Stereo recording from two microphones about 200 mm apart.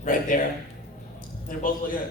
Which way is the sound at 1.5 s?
45° left (ahead or behind).